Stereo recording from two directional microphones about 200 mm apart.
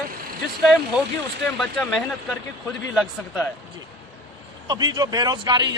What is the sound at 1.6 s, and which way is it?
A man's voice, centre (ahead or behind).